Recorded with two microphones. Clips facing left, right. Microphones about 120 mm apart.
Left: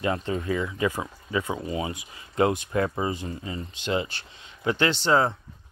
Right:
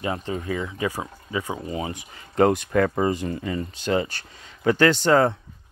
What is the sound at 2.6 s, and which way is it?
Speech, 65° right (ahead or behind).